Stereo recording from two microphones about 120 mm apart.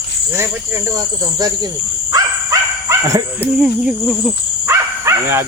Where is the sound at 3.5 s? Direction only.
10° right (ahead or behind).